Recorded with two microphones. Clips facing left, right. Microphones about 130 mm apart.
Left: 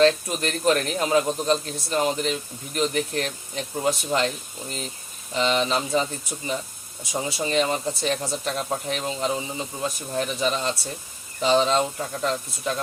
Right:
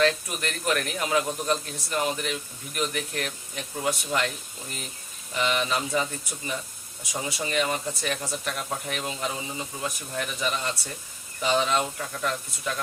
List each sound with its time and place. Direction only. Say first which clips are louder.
0.0 s a man's voice: left 5 dB; 30° left (ahead or behind)
5.3 s a man's voice: left 4 dB; 25° left (ahead or behind)
7.1 s a man's voice: left 4 dB; 25° left (ahead or behind)